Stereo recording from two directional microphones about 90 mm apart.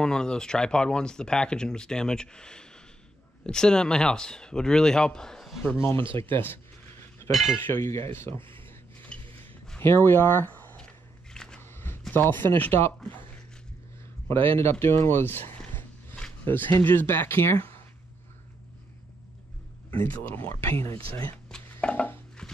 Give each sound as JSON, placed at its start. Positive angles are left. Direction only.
{"t": 0.0, "sound": "speech", "side_deg": 10}
{"t": 5.8, "sound": "speech", "side_deg": 25}
{"t": 7.2, "sound": "cutlery", "side_deg": 0}
{"t": 7.6, "sound": "speech", "side_deg": 30}
{"t": 8.5, "sound": "a sound", "side_deg": 25}
{"t": 9.8, "sound": "speech", "side_deg": 25}
{"t": 11.3, "sound": "a sound", "side_deg": 10}
{"t": 11.6, "sound": "zipper", "side_deg": 25}
{"t": 12.1, "sound": "speech", "side_deg": 20}
{"t": 14.2, "sound": "speech", "side_deg": 25}
{"t": 15.0, "sound": "a sound", "side_deg": 25}
{"t": 16.4, "sound": "speech", "side_deg": 20}
{"t": 20.0, "sound": "speech", "side_deg": 25}
{"t": 21.8, "sound": "a sound", "side_deg": 20}